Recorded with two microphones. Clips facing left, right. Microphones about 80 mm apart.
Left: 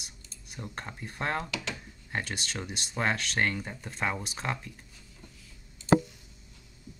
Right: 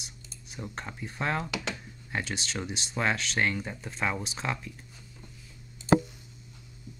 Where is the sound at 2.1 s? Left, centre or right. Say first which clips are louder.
Right 1 dB; centre.